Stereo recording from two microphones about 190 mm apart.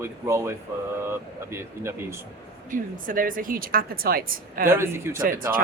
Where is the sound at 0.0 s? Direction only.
15° right (ahead or behind).